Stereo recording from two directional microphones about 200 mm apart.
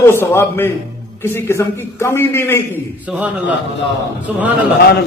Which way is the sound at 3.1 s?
5° right (ahead or behind).